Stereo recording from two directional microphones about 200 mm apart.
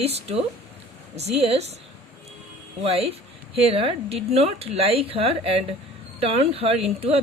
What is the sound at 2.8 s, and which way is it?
Speech, 30° right (ahead or behind).